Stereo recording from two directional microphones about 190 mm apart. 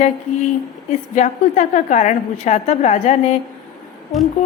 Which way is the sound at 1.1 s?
40° left (ahead or behind).